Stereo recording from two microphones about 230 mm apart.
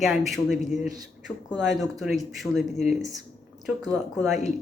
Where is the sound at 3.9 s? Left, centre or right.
Centre.